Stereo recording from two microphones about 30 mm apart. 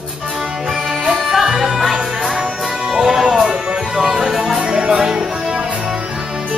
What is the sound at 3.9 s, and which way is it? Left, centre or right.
Music, centre.